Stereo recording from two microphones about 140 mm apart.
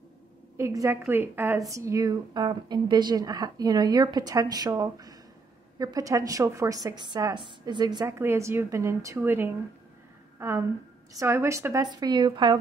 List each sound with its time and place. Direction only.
0.6 s a woman's voice: 20° right (ahead or behind)